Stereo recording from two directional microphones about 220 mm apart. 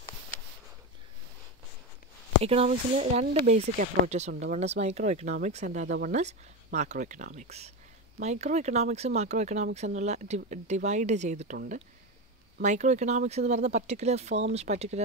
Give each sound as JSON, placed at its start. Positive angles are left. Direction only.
{"t": 2.4, "sound": "speech", "side_deg": -25}
{"t": 3.7, "sound": "speech", "side_deg": -40}